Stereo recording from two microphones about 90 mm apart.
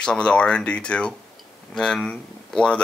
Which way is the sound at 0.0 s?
10° left (ahead or behind).